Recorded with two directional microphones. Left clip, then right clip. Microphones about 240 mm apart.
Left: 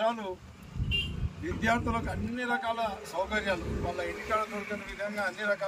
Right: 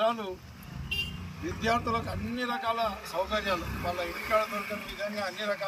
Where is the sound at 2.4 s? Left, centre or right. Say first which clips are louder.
Right 1 dB; centre.